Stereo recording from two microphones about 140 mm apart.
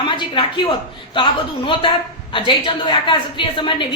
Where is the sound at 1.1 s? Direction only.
35° left (ahead or behind).